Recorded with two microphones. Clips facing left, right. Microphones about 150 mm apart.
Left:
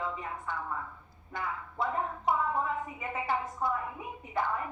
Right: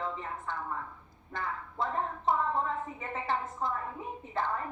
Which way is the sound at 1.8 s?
15° left (ahead or behind).